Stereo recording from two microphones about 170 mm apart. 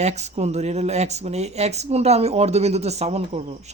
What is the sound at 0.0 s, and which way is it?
Speech, 40° right (ahead or behind).